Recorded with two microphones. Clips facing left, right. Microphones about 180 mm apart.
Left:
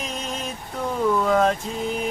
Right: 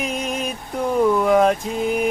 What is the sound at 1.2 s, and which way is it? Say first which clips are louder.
Mantra: right 4 dB; 15° right (ahead or behind).